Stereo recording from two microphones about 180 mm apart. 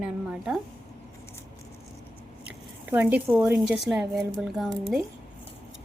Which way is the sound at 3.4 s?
5° right (ahead or behind).